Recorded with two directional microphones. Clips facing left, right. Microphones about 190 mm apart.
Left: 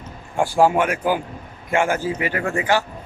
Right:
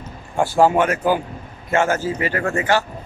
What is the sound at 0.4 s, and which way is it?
A man's voice, 15° left (ahead or behind).